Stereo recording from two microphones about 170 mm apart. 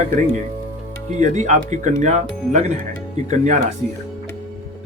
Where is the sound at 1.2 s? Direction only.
45° right (ahead or behind).